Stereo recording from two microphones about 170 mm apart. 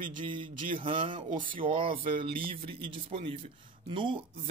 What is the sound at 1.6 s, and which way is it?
Speech, 30° right (ahead or behind).